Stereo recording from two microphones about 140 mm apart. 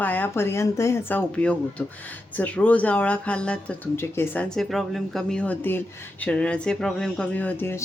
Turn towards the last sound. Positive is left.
turn(degrees=15)  # may be behind; listen again after turning